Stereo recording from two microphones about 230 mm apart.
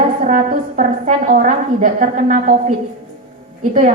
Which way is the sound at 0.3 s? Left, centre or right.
Right.